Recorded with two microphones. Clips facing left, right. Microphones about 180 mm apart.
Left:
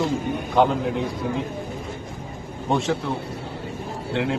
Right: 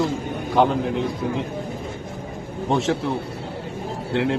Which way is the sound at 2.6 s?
Centre (ahead or behind).